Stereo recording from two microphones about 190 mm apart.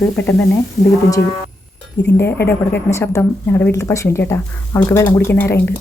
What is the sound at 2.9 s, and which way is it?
Speech, 15° left (ahead or behind).